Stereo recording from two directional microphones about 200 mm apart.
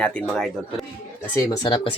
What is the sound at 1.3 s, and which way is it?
Speech, 15° left (ahead or behind).